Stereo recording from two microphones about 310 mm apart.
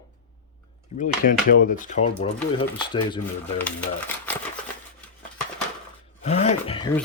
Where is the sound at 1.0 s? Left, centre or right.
Left; by 4.4 s centre.